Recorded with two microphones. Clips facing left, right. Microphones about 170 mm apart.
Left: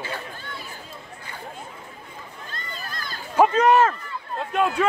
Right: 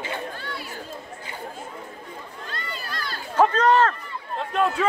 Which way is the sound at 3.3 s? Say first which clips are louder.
Left 2 dB; 10° left (ahead or behind).